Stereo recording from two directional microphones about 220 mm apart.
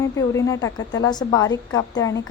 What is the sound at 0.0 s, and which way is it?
A woman's voice, 15° left (ahead or behind).